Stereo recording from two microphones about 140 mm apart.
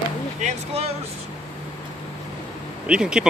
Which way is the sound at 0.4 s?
50° right (ahead or behind).